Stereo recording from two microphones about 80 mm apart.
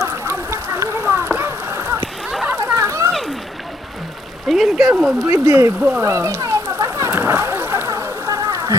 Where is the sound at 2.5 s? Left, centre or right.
Right.